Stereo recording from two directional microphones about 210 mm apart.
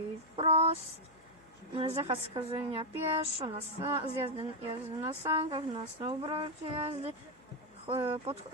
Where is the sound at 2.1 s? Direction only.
25° right (ahead or behind).